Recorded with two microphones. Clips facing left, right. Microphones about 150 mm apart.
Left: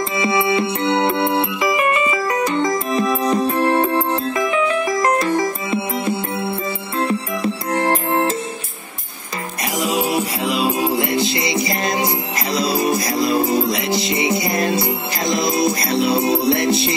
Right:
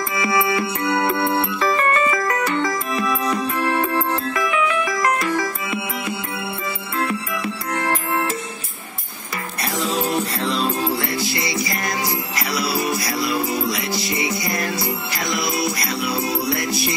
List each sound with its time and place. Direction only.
0.2 s music: 25° left (ahead or behind)
9.8 s music: 10° left (ahead or behind)